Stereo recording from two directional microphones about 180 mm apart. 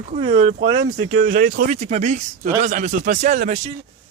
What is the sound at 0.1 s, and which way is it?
Speech, 40° right (ahead or behind).